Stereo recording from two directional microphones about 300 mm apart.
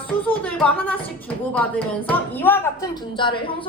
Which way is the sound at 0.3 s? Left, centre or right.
Centre.